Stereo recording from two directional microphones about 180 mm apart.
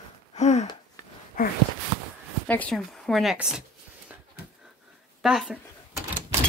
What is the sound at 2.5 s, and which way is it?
Speech, 5° left (ahead or behind).